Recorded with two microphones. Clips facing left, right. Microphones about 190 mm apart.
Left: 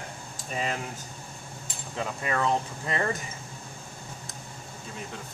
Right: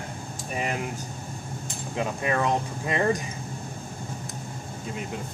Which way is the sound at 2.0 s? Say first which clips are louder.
Right 3 dB; 15° right (ahead or behind).